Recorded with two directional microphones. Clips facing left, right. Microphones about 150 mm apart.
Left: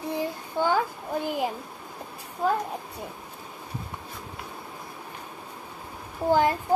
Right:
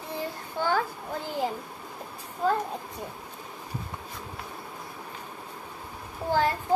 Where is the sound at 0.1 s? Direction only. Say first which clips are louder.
Left 3 dB; 15° left (ahead or behind).